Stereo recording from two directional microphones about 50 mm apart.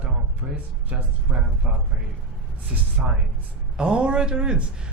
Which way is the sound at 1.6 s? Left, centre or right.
Right.